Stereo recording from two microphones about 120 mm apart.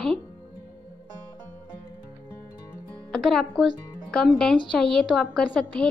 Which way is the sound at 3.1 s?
5° left (ahead or behind).